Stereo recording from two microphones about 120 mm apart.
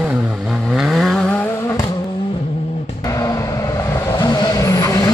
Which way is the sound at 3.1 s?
30° left (ahead or behind).